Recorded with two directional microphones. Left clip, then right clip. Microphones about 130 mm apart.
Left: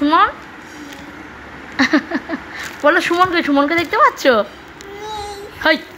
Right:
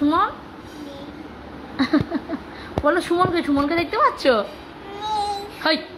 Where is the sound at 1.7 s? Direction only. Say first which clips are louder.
Left 6 dB; 55° left (ahead or behind).